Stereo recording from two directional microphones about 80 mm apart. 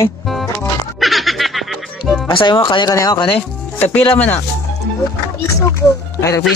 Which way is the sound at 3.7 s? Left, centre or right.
Left.